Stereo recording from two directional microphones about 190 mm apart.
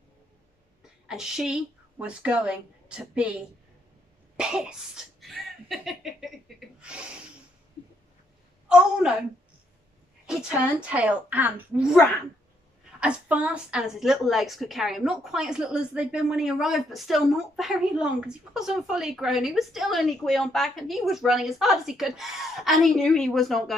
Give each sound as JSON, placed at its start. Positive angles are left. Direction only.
{"t": 1.0, "sound": "a woman's voice", "side_deg": -5}
{"t": 4.4, "sound": "a sound", "side_deg": -5}
{"t": 8.6, "sound": "a woman's voice", "side_deg": -5}
{"t": 10.9, "sound": "a woman's voice", "side_deg": -5}
{"t": 13.0, "sound": "a woman's voice", "side_deg": -5}